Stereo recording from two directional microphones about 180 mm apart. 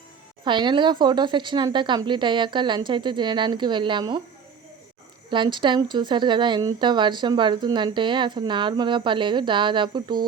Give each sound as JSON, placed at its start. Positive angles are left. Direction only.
{"t": 0.4, "sound": "speech", "side_deg": -25}
{"t": 5.3, "sound": "speech", "side_deg": -25}